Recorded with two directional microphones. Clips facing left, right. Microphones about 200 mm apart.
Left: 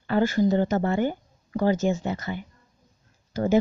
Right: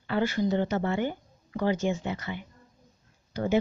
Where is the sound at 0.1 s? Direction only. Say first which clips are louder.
Left 5 dB; 40° left (ahead or behind).